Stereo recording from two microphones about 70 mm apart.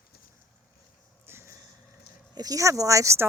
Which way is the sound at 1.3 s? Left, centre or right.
Right.